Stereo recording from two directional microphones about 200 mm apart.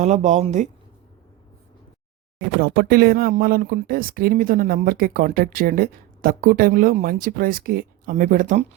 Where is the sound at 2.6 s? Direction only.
50° right (ahead or behind).